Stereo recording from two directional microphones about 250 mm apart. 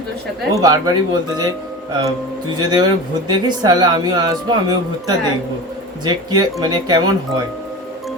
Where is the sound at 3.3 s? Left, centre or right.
Centre.